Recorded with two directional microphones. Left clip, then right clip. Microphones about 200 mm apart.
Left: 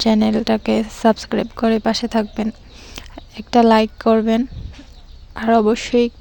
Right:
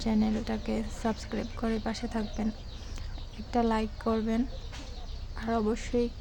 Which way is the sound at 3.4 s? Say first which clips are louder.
Left 16 dB; 45° left (ahead or behind).